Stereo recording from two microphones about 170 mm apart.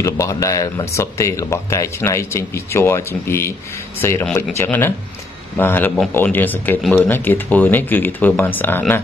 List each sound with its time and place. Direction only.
0.0 s speech: 20° left (ahead or behind)